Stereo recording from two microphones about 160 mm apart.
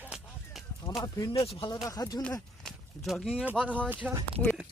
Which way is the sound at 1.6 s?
25° left (ahead or behind).